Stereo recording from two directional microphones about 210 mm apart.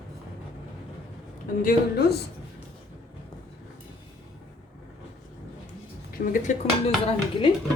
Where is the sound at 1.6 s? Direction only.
50° left (ahead or behind).